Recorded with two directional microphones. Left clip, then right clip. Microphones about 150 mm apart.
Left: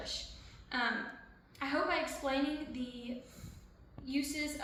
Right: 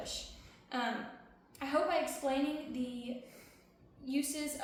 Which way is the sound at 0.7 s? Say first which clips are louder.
Left 2 dB; 40° right (ahead or behind).